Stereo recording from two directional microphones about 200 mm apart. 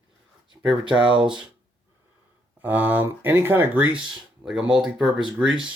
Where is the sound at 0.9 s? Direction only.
25° right (ahead or behind).